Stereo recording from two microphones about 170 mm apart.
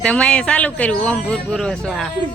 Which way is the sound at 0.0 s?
5° left (ahead or behind).